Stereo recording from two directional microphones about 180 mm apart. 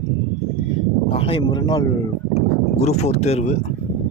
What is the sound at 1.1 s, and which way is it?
Speech, 30° left (ahead or behind).